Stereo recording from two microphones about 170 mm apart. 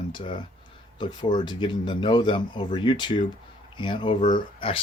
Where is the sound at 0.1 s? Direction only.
30° left (ahead or behind).